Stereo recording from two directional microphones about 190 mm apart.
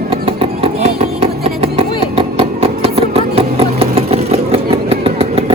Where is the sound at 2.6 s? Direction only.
30° right (ahead or behind).